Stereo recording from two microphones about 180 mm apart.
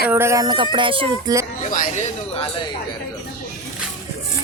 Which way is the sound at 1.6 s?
45° left (ahead or behind).